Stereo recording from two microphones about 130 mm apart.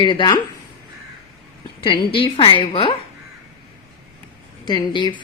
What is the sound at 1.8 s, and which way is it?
A woman's voice, 40° left (ahead or behind).